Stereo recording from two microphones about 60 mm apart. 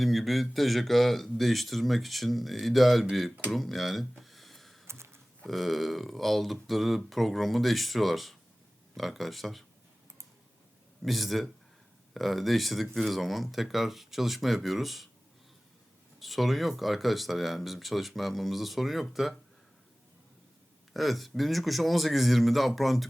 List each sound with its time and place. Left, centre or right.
0.0 s speech: centre
4.2 s a sound: centre
4.9 s a sound: right
5.5 s speech: centre
11.0 s speech: centre
16.2 s speech: centre
20.9 s speech: centre